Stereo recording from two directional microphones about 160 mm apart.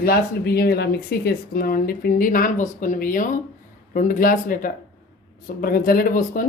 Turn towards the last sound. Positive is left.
turn(degrees=60)  # may be behind; listen again after turning